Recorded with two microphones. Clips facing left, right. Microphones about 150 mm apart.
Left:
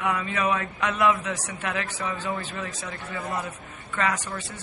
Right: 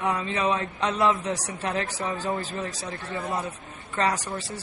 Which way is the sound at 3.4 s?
30° right (ahead or behind).